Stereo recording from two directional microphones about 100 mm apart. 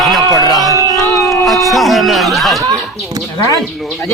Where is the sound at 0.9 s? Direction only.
30° left (ahead or behind).